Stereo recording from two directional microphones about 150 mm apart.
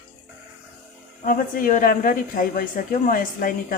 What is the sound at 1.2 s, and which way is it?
A woman's voice, 70° left (ahead or behind).